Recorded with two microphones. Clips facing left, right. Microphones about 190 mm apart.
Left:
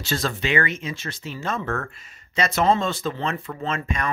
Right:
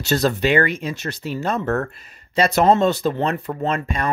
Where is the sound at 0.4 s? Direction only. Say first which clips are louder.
Right 6 dB; 35° right (ahead or behind).